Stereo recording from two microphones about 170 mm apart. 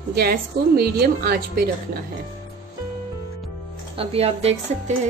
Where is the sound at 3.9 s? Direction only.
35° right (ahead or behind).